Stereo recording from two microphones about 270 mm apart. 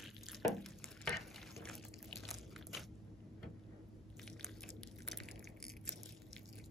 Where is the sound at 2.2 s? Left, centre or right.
Centre.